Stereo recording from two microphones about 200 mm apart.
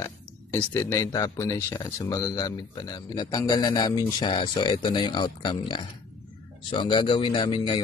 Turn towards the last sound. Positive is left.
turn(degrees=25)  # may be behind; listen again after turning